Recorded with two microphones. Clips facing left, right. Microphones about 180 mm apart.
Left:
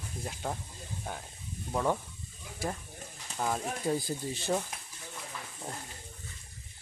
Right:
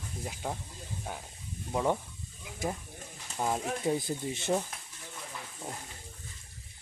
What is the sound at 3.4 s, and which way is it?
Speech, 15° right (ahead or behind).